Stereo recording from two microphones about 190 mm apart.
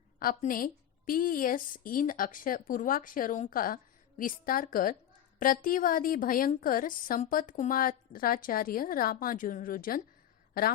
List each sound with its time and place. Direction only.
0.2 s a woman's voice: 50° left (ahead or behind)